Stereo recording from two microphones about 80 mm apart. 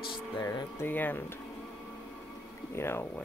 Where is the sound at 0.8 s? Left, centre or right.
Left.